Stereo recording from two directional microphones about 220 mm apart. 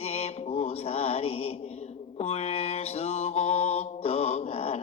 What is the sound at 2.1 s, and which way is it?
Mantra, 30° left (ahead or behind).